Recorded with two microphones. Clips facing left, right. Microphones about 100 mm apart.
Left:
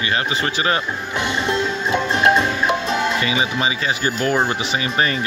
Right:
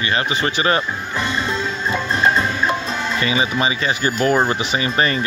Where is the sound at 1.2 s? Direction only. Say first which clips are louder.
Left 2 dB; 80° left.